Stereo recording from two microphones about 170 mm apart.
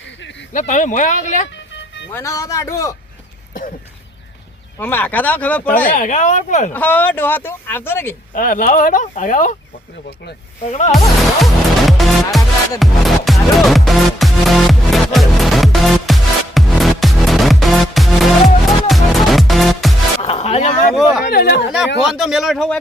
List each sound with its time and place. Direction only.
0.5 s speech: 45° left (ahead or behind)
2.1 s a man's voice: 20° left (ahead or behind)
4.8 s speech: 10° left (ahead or behind)
5.9 s speech: 50° left (ahead or behind)
6.7 s speech: 10° left (ahead or behind)
8.3 s speech: 50° left (ahead or behind)
10.7 s music: 40° left (ahead or behind)
10.9 s music: centre (ahead or behind)
20.2 s music: 35° left (ahead or behind)
20.9 s speech: 5° right (ahead or behind)
21.2 s speech: 70° left (ahead or behind)
22.1 s music: centre (ahead or behind)